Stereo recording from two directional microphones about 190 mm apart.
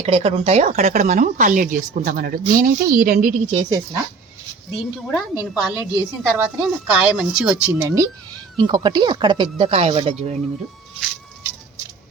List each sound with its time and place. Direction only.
0.0 s speech: 30° right (ahead or behind)
3.5 s speech: 30° right (ahead or behind)
4.7 s speech: centre (ahead or behind)
5.3 s a woman's voice: 20° left (ahead or behind)
6.0 s a woman's voice: 10° right (ahead or behind); by 10.3 s 30° right (ahead or behind)